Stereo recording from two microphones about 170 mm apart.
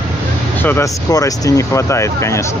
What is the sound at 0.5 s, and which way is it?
Speech, 15° left (ahead or behind).